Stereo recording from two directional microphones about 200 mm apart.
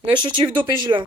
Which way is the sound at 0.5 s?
20° right (ahead or behind).